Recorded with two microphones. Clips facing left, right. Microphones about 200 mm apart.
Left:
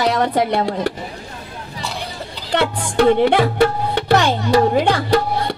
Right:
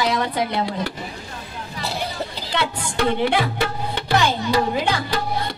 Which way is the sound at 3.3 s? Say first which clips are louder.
Left 7 dB; 60° left (ahead or behind).